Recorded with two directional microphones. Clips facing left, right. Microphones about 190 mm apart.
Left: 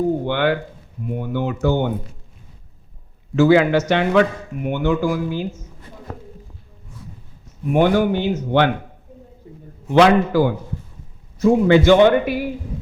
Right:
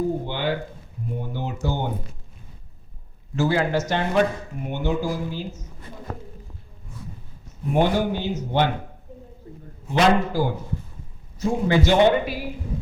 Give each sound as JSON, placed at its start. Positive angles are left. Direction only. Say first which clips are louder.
{"t": 0.3, "sound": "a man's voice", "louder": "left 7 dB", "side_deg": 65}
{"t": 3.3, "sound": "a man's voice", "louder": "left 8 dB", "side_deg": 75}
{"t": 7.7, "sound": "a man's voice", "louder": "left 5 dB", "side_deg": 60}
{"t": 9.9, "sound": "a man's voice", "louder": "left 6 dB", "side_deg": 70}